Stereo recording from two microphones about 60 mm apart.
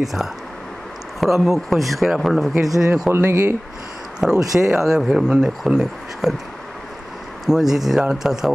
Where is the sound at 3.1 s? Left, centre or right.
Right.